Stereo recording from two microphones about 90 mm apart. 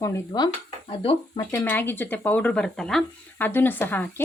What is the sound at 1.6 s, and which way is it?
Speech, 20° left (ahead or behind).